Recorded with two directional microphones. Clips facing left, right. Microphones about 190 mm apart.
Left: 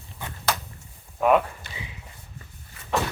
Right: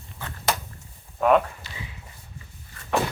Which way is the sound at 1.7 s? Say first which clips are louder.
Left 1 dB; 55° left (ahead or behind).